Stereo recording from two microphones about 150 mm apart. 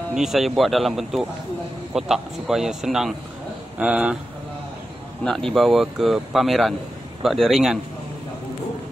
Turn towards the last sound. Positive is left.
turn(degrees=0)  # may be behind; listen again after turning